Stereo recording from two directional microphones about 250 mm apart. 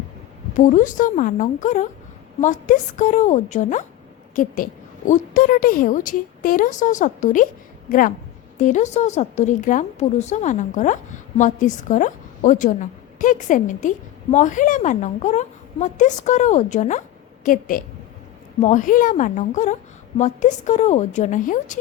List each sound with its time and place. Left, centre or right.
0.5 s a woman's voice: left